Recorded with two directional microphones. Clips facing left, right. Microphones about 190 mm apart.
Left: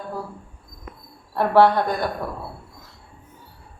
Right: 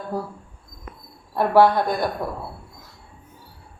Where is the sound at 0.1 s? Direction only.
40° right (ahead or behind).